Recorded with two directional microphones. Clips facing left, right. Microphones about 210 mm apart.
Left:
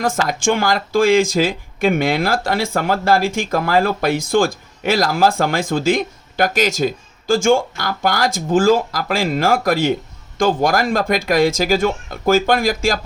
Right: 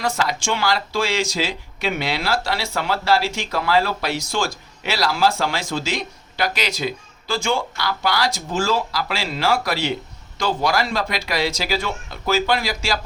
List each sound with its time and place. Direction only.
0.0 s speech: 50° left (ahead or behind)